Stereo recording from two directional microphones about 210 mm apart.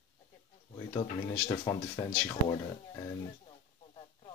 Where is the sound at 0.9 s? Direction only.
15° left (ahead or behind).